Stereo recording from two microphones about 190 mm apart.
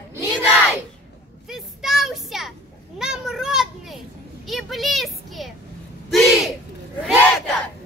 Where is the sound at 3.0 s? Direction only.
5° right (ahead or behind).